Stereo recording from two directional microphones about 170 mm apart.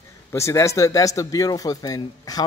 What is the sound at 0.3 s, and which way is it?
Speech, 15° left (ahead or behind).